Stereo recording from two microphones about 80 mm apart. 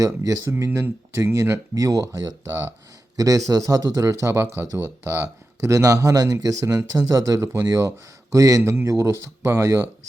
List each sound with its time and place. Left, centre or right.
0.0 s speech: right
0.6 s speech: right